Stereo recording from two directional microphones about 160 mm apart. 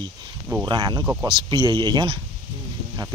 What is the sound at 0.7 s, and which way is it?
Speech, 30° right (ahead or behind).